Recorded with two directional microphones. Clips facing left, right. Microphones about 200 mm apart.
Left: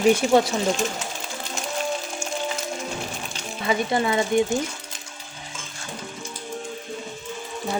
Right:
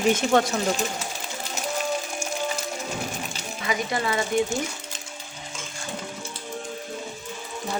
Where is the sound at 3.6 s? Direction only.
25° left (ahead or behind).